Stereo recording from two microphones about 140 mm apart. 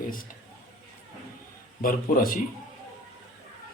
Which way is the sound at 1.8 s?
75° left (ahead or behind).